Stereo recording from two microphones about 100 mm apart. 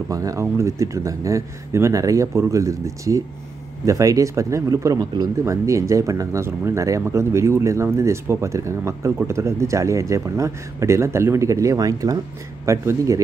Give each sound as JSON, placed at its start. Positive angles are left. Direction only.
{"t": 0.1, "sound": "speech", "side_deg": -35}